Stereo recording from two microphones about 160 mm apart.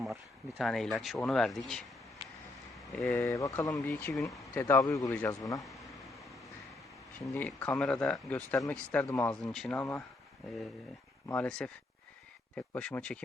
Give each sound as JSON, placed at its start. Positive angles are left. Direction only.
{"t": 0.0, "sound": "speech", "side_deg": 0}
{"t": 2.7, "sound": "a sound", "side_deg": 0}
{"t": 3.2, "sound": "speech", "side_deg": 20}
{"t": 3.8, "sound": "speech", "side_deg": 5}
{"t": 4.5, "sound": "speech", "side_deg": 20}
{"t": 5.5, "sound": "a sound", "side_deg": 0}
{"t": 7.3, "sound": "speech", "side_deg": 10}
{"t": 9.0, "sound": "speech", "side_deg": 20}
{"t": 9.4, "sound": "speech", "side_deg": 0}
{"t": 11.3, "sound": "speech", "side_deg": 5}